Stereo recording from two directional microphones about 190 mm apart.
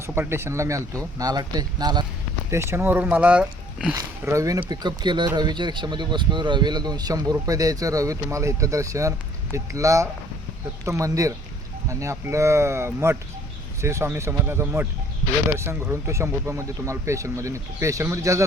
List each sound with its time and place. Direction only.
0.0 s speech: 10° right (ahead or behind)
3.9 s speech: 15° right (ahead or behind)